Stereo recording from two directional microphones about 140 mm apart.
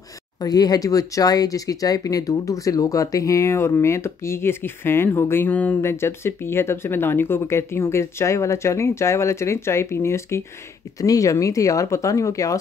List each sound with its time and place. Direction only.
0.4 s speech: 25° left (ahead or behind)